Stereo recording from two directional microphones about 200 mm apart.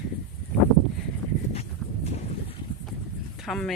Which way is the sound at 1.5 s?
30° left (ahead or behind).